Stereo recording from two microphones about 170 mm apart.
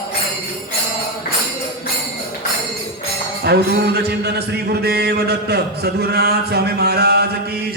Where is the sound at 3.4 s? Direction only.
70° right (ahead or behind).